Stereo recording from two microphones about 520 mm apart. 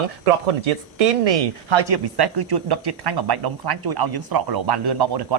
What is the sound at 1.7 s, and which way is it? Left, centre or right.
Speech, right.